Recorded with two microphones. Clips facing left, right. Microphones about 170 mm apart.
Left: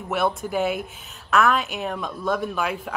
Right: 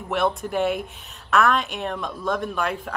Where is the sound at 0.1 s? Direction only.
Centre (ahead or behind).